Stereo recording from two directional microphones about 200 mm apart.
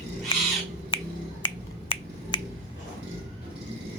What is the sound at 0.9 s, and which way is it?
Finger snapping, 25° left (ahead or behind).